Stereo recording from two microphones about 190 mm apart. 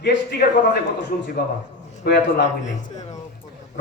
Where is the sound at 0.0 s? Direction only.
55° left (ahead or behind).